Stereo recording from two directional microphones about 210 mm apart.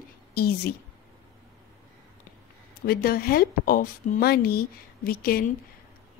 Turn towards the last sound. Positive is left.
turn(degrees=45)  # may be behind; listen again after turning